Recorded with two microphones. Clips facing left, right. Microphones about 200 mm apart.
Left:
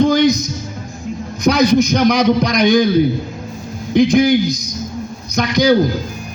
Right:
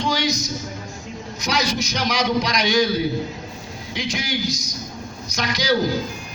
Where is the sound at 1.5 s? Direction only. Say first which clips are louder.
Left 12 dB; 55° left (ahead or behind).